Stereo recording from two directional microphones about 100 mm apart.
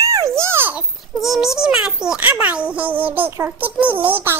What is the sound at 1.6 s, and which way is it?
A child's voice, 5° right (ahead or behind).